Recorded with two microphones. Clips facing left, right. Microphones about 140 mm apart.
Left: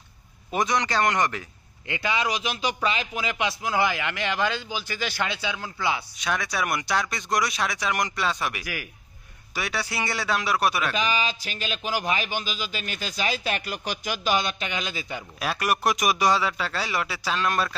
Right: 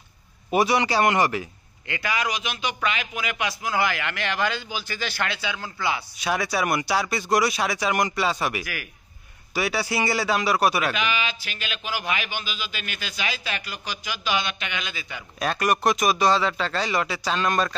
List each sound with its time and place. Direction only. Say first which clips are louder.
0.5 s a man's voice: right 4 dB; 10° right (ahead or behind)
1.9 s a man's voice: left 1 dB; 25° left (ahead or behind)
6.1 s speech: right 3 dB; 5° right (ahead or behind)
11.0 s a man's voice: left 1 dB; 35° left (ahead or behind)
15.3 s a man's voice: right 3 dB; 5° left (ahead or behind)